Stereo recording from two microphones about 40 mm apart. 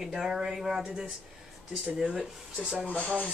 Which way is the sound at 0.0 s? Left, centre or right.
Centre.